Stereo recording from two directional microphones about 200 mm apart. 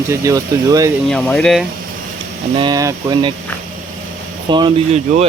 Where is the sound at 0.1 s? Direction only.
15° right (ahead or behind).